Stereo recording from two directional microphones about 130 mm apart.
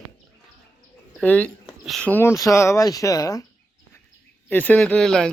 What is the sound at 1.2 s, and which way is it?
Speech, 10° left (ahead or behind).